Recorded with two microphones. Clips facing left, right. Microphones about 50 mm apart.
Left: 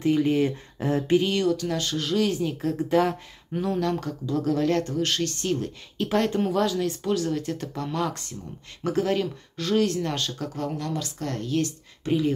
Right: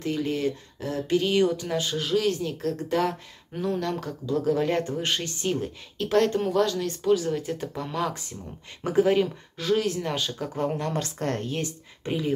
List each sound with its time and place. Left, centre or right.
0.0 s speech: centre
1.4 s speech: centre
5.9 s speech: centre
10.5 s speech: right
10.9 s a woman's voice: right
12.1 s speech: centre